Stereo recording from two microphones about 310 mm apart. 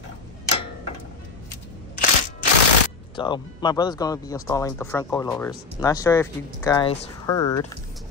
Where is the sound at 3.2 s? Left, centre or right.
Centre.